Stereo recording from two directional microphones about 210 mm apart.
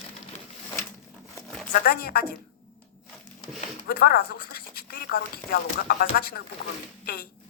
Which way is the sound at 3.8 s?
45° left (ahead or behind).